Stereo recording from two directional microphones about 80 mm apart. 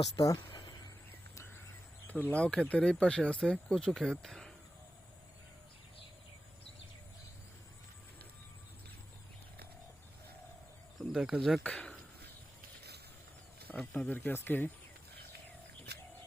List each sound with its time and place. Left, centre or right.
0.0 s speech: left
0.5 s a sound: left
2.0 s speech: left
10.9 s cricket: centre
11.3 s speech: centre
11.6 s speech: centre
13.7 s speech: left